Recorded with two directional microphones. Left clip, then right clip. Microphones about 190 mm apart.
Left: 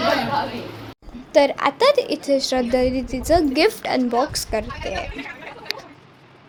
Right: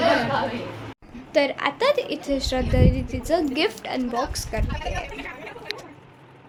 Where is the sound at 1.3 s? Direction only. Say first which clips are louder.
Left 5 dB; 25° left (ahead or behind).